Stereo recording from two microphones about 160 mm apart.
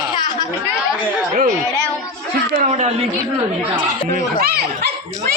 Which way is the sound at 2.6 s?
45° right (ahead or behind).